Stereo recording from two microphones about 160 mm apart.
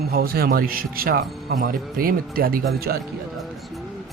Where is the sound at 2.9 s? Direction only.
90° right.